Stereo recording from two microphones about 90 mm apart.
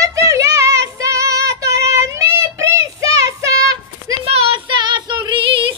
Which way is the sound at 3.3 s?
40° right (ahead or behind).